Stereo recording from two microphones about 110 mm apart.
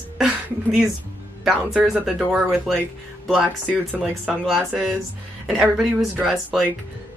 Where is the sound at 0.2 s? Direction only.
5° right (ahead or behind).